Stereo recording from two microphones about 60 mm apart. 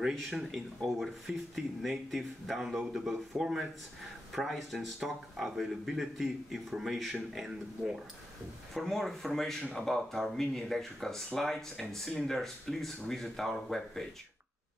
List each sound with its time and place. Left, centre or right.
0.1 s speech: centre